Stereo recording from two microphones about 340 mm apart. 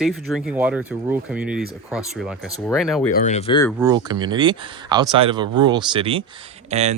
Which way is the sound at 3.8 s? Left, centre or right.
Centre.